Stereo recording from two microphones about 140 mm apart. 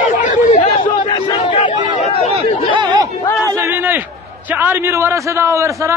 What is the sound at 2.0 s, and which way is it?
Speech, 50° left (ahead or behind).